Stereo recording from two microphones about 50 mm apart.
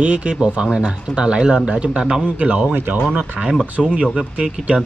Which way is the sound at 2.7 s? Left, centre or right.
Right.